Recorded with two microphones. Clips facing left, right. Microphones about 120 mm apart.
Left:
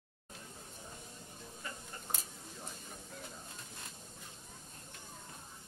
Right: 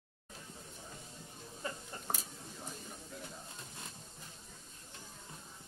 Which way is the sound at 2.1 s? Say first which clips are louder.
Right 5 dB; 65° right (ahead or behind).